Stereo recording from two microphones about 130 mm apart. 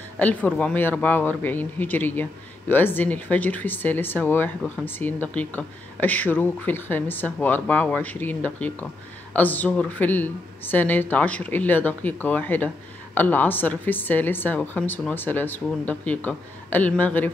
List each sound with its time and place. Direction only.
0.2 s speech: 10° left (ahead or behind)